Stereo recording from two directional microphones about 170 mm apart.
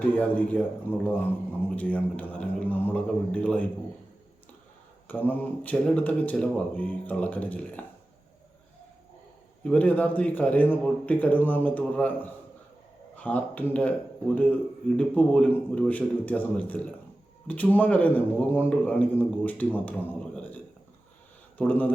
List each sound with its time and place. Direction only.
0.2 s a man's voice: 10° left (ahead or behind)
5.0 s a man's voice: 10° left (ahead or behind)
9.6 s a man's voice: 10° left (ahead or behind)
14.9 s a man's voice: 5° left (ahead or behind)
21.6 s a man's voice: 10° left (ahead or behind)